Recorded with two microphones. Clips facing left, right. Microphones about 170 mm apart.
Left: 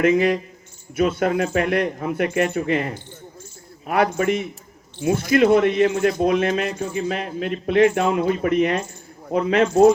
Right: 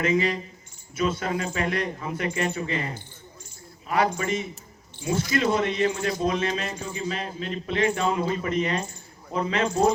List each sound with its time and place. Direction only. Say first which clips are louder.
0.0 s speech: left 7 dB; 55° left (ahead or behind)